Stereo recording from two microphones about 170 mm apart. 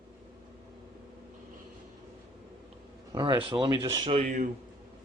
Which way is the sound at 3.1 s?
25° right (ahead or behind).